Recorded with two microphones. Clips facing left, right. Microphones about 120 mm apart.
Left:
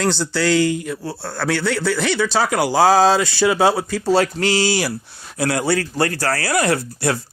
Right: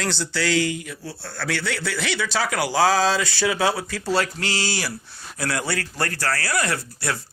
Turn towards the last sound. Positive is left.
turn(degrees=25)  # may be behind; listen again after turning